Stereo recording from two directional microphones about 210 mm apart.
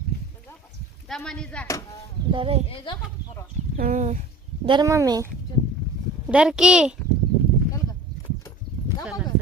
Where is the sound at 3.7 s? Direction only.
40° right (ahead or behind).